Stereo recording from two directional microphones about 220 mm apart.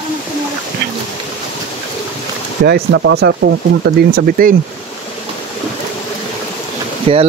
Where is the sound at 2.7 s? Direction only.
50° right (ahead or behind).